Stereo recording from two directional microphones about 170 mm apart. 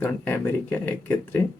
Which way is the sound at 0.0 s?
10° left (ahead or behind).